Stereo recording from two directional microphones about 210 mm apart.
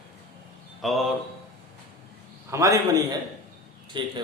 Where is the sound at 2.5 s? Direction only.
15° right (ahead or behind).